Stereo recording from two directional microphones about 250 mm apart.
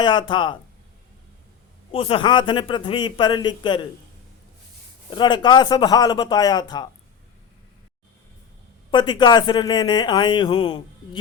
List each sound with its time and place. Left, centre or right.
0.0 s a man's voice: centre
1.9 s a man's voice: left
5.1 s speech: centre
8.9 s speech: centre